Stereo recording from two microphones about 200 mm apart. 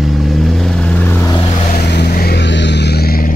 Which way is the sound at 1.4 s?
30° left (ahead or behind).